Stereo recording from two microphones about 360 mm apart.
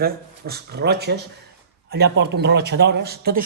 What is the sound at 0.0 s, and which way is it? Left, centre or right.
Speech, right.